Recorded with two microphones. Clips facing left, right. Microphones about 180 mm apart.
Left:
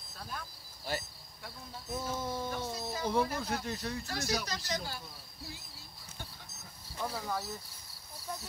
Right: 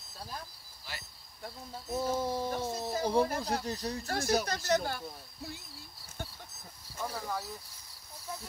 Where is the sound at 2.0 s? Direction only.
35° right (ahead or behind).